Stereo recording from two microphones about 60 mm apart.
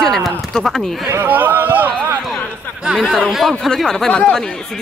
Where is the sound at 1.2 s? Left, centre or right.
Right.